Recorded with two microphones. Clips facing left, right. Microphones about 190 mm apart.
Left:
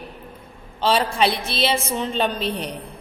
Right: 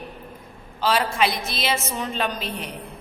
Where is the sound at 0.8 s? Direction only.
30° left (ahead or behind).